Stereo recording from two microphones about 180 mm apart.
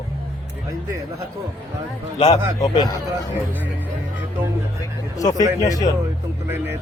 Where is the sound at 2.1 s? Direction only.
30° left (ahead or behind).